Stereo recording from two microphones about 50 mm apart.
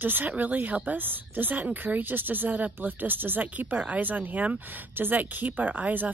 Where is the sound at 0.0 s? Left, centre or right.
Right.